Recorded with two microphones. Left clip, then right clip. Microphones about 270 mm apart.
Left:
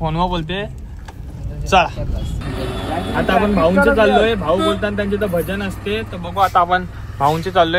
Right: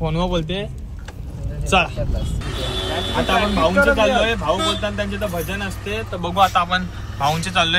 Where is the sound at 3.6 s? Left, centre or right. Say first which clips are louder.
Left 2 dB; centre.